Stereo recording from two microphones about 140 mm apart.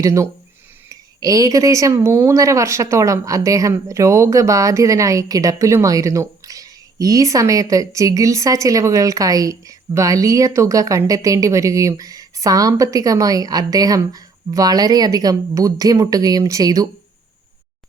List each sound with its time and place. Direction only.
0.0 s speech: 25° right (ahead or behind)